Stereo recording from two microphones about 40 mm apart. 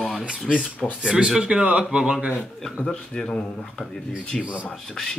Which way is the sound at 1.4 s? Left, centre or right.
Right.